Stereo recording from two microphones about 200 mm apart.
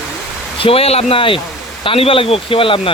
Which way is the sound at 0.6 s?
30° left (ahead or behind).